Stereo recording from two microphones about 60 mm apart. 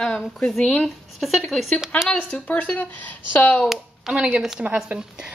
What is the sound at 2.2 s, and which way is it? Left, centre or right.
A woman's voice, left.